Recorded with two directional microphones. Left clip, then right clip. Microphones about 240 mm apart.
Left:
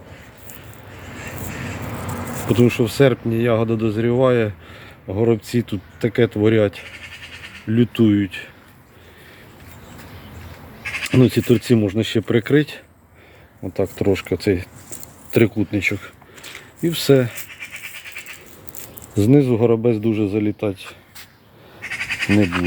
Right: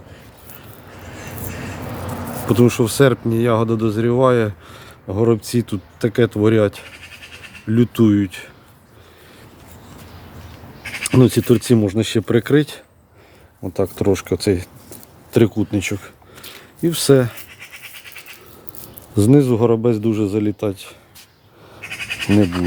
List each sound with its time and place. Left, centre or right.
2.5 s speech: centre
6.8 s bleat: right
7.7 s speech: centre
10.8 s bleat: right
11.2 s speech: centre
17.6 s a sound: right
19.1 s speech: centre
21.8 s bleat: right